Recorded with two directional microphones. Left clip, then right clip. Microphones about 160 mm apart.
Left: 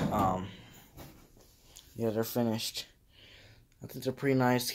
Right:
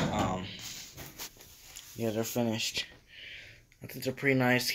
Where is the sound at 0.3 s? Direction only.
25° left (ahead or behind).